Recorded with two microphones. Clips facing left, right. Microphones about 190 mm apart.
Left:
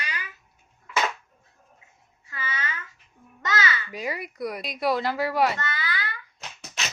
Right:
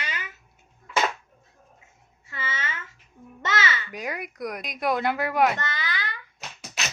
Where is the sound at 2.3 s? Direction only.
25° right (ahead or behind).